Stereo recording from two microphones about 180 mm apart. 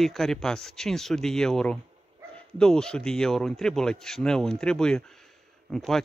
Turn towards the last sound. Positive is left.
turn(degrees=0)  # may be behind; listen again after turning